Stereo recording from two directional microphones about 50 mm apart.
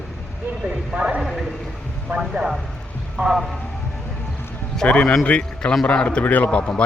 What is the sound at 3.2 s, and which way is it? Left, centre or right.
Speech, right.